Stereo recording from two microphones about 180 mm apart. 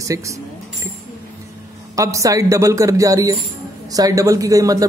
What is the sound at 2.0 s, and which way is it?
A man's voice, 20° right (ahead or behind).